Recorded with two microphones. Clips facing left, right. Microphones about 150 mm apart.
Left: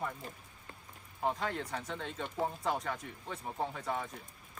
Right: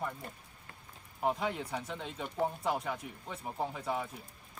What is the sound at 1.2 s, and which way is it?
Speech, 10° right (ahead or behind).